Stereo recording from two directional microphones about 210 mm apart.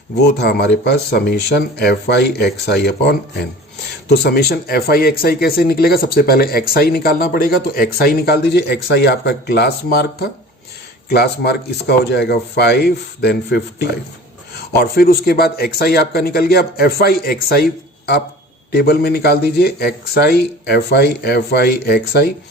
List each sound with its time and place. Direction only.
0.2 s speech: 50° left (ahead or behind)